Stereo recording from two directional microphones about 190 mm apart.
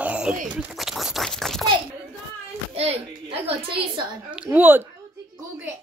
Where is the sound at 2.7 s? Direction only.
30° right (ahead or behind).